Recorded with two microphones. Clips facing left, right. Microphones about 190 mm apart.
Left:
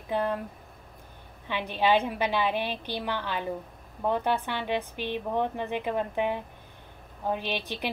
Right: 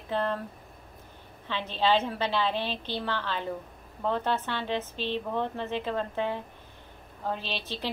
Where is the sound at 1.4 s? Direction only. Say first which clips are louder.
Left 1 dB; 15° left (ahead or behind).